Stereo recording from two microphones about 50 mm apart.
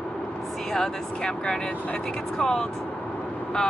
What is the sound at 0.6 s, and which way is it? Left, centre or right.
Speech, centre.